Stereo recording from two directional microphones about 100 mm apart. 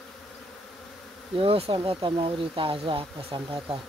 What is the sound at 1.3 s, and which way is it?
Speech, 70° right (ahead or behind).